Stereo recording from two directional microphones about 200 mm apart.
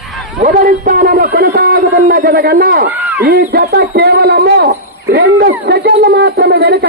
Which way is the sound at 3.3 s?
50° right (ahead or behind).